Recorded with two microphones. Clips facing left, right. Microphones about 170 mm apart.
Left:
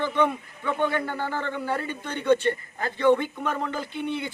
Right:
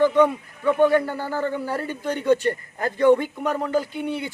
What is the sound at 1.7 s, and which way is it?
Speech, 40° right (ahead or behind).